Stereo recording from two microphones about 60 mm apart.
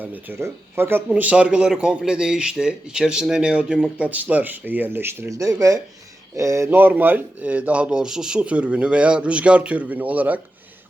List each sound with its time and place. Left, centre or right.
0.0 s speech: right
0.3 s speech: right
1.2 s speech: right
5.3 s speech: right
6.3 s speech: right
6.7 s speech: right